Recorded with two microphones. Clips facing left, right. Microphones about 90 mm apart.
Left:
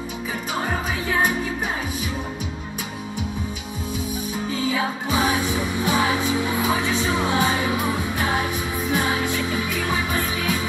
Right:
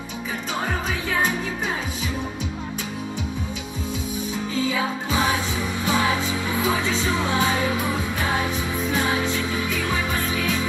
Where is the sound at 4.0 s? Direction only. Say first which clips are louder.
Left 1 dB; 15° left (ahead or behind).